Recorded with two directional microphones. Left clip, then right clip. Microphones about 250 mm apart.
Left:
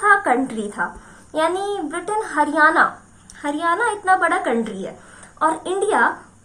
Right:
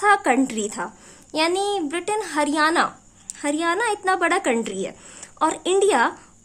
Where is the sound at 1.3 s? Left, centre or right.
Right.